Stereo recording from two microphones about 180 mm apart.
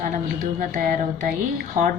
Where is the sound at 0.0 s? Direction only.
45° right (ahead or behind).